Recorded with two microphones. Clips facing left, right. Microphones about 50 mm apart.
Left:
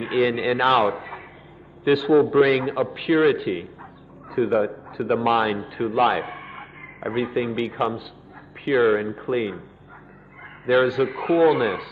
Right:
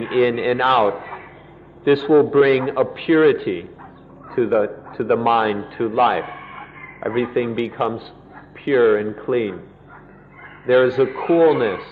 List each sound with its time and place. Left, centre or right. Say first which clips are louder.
0.0 s a man's voice: right 4 dB; centre
10.6 s a man's voice: right 4 dB; centre